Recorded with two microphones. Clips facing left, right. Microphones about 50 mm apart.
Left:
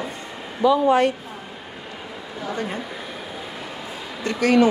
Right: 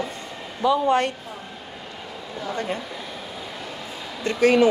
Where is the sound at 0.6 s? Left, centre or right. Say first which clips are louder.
Left 3 dB; centre.